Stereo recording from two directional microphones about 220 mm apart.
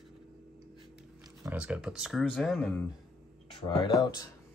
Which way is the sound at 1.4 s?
5° right (ahead or behind).